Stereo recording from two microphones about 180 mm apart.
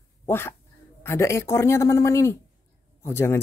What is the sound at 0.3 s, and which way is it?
Speech, 15° left (ahead or behind).